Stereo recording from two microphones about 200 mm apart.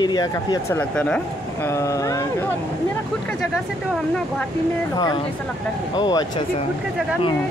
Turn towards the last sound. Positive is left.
turn(degrees=20)  # may be behind; listen again after turning